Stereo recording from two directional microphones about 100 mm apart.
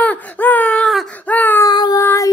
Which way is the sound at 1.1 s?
15° left (ahead or behind).